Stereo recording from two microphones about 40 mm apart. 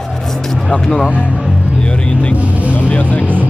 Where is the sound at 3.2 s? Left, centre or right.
Right.